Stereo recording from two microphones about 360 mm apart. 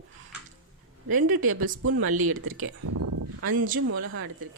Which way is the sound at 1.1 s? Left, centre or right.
Right.